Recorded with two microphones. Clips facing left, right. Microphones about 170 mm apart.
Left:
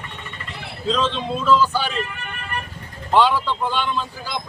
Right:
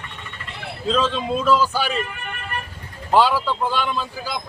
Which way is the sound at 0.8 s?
5° right (ahead or behind).